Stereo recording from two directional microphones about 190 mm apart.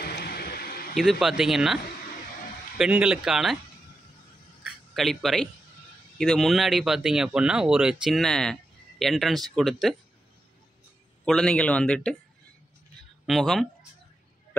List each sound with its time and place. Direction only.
0.0 s a sound: 55° left (ahead or behind)
0.9 s speech: centre (ahead or behind)
2.8 s speech: 5° right (ahead or behind)
4.9 s speech: centre (ahead or behind)
11.2 s speech: 5° left (ahead or behind)
13.3 s speech: centre (ahead or behind)